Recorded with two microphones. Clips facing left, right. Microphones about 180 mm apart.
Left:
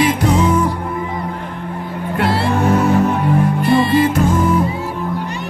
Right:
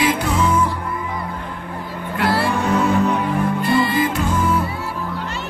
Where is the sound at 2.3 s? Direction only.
25° left (ahead or behind).